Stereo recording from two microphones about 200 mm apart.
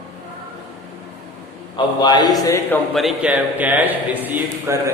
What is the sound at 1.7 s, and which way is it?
A man's voice, 20° left (ahead or behind).